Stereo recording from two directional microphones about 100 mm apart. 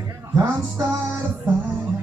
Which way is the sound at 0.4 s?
25° right (ahead or behind).